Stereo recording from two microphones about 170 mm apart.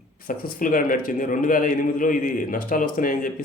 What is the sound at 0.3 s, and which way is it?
Speech, 55° left (ahead or behind).